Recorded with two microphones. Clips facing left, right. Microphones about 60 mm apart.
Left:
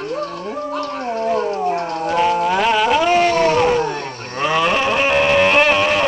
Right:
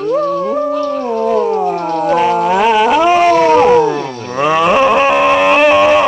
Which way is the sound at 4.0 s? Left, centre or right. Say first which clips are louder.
Right 7 dB; left.